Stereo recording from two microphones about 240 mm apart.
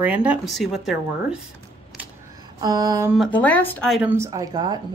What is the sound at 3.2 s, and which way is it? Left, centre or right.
Speech, centre.